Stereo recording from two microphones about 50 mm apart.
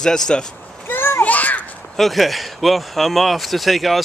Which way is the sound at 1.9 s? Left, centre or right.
Centre.